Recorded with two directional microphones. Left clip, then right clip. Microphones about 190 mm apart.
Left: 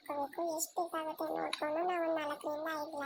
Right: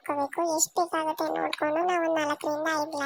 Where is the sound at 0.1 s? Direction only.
40° right (ahead or behind).